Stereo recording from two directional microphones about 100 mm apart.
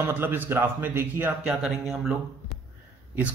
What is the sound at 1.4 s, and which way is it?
Speech, 5° right (ahead or behind).